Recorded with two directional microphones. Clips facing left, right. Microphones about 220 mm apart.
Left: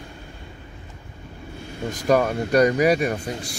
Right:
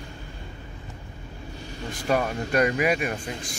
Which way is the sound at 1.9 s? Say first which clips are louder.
Left 5 dB; 40° left (ahead or behind).